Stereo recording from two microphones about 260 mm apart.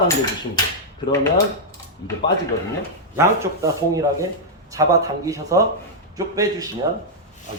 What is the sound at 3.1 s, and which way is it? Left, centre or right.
A man's voice, centre.